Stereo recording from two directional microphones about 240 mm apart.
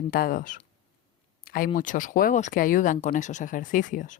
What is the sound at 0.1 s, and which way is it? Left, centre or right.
Speech, left.